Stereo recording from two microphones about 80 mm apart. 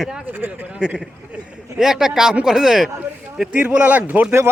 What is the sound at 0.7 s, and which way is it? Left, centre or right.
A man's voice, centre.